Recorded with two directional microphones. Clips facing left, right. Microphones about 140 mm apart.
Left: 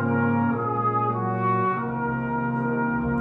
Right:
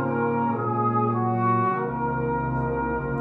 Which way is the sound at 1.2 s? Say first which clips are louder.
Right 1 dB; 30° right (ahead or behind).